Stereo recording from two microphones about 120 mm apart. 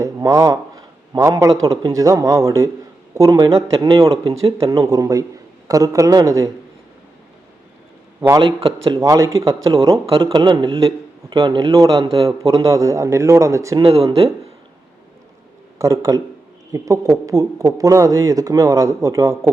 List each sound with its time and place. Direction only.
0.0 s a man's voice: 30° right (ahead or behind)
3.5 s speech: 45° right (ahead or behind)
4.7 s speech: 30° right (ahead or behind)
8.4 s a man's voice: 45° right (ahead or behind)
9.0 s speech: 25° right (ahead or behind)
9.6 s a man's voice: 45° right (ahead or behind); by 13.8 s 25° right (ahead or behind)
13.8 s speech: 55° right (ahead or behind)
15.8 s speech: 25° right (ahead or behind)